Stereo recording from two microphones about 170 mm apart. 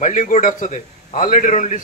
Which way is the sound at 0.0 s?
50° left (ahead or behind).